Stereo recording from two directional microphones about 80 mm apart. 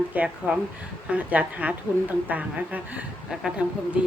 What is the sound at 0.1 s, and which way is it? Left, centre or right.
A woman's voice, centre.